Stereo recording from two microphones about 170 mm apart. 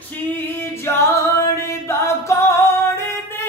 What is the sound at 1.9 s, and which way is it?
A capella, 15° left (ahead or behind).